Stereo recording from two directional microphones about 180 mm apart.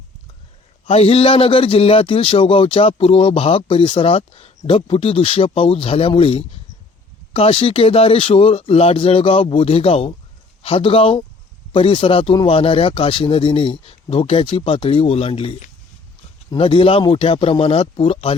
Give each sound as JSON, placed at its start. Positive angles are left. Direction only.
{"t": 0.9, "sound": "a man's voice", "side_deg": 35}